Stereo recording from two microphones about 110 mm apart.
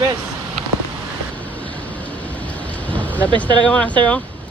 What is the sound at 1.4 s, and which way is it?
Vehicle, 15° left (ahead or behind).